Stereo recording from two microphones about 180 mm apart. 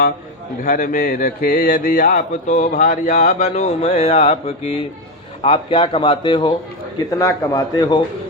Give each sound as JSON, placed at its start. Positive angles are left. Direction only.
{"t": 0.6, "sound": "mantra", "side_deg": 50}
{"t": 5.4, "sound": "speech", "side_deg": 30}